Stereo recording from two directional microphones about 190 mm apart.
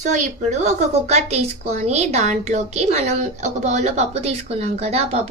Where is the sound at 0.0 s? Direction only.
40° right (ahead or behind).